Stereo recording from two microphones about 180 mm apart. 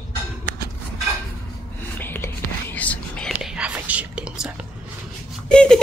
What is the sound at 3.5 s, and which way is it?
Whispering, 10° right (ahead or behind).